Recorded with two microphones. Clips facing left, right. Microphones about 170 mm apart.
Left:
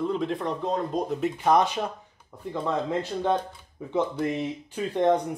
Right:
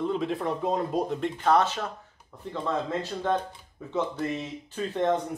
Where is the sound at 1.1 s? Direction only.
10° left (ahead or behind).